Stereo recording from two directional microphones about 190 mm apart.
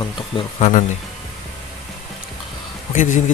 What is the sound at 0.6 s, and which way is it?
Speech, 40° left (ahead or behind).